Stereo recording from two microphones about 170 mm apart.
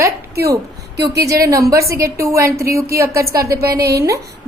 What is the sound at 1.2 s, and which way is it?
A woman's voice, 20° right (ahead or behind).